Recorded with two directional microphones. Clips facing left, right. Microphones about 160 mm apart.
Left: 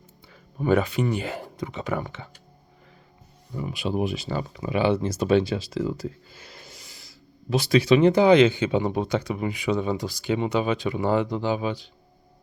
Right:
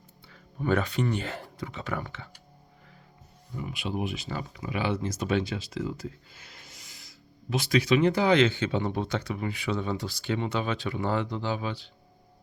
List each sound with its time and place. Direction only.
0.3 s speech: 15° left (ahead or behind)
3.5 s speech: 35° left (ahead or behind); by 11.9 s 15° left (ahead or behind)